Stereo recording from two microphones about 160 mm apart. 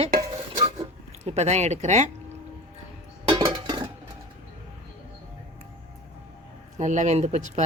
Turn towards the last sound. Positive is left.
turn(degrees=-45)  # may be behind; listen again after turning